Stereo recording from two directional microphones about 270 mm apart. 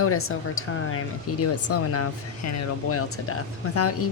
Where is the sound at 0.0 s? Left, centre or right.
Left.